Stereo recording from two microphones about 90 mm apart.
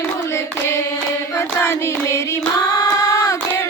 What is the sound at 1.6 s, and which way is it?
Hands, 30° left (ahead or behind).